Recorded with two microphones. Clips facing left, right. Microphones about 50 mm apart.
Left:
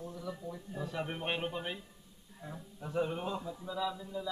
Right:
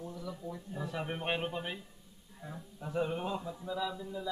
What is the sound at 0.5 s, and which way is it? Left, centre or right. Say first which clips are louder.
Speech: right 1 dB; centre.